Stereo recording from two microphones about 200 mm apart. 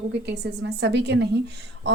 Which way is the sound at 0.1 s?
60° right (ahead or behind).